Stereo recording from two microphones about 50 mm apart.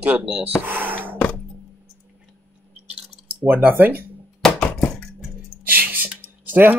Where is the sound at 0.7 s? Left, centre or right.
Right.